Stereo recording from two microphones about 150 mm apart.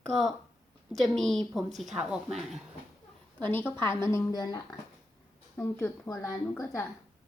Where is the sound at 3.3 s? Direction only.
10° left (ahead or behind); by 4.6 s 25° left (ahead or behind).